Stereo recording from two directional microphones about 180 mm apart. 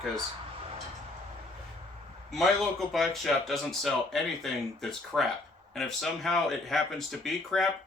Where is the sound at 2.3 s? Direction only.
Centre (ahead or behind).